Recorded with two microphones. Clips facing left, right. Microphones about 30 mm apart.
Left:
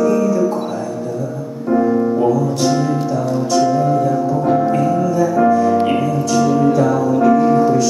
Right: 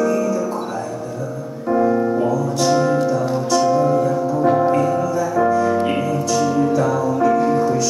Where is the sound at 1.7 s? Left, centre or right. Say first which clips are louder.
Left 2 dB; centre.